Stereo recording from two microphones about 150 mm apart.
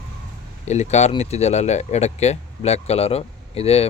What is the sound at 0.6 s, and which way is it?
Speech, 50° left (ahead or behind).